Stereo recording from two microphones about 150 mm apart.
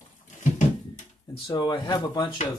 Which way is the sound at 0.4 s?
55° left (ahead or behind).